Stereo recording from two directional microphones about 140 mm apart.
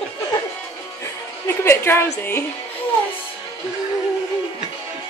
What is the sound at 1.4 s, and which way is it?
Speech, 15° left (ahead or behind).